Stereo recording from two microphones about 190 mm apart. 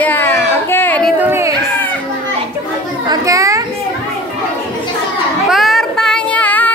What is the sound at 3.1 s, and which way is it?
Chatter, 15° right (ahead or behind).